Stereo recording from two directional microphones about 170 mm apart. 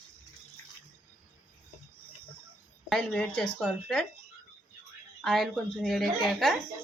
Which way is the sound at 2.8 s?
5° left (ahead or behind).